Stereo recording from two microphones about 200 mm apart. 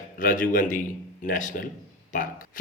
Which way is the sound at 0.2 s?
45° left (ahead or behind).